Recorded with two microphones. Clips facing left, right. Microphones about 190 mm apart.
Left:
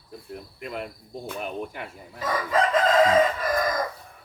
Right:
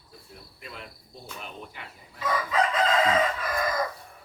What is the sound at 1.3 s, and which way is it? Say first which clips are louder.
Speech: left 9 dB; 55° left (ahead or behind).